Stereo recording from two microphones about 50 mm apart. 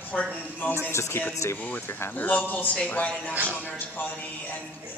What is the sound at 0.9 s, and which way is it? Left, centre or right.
Speech, left.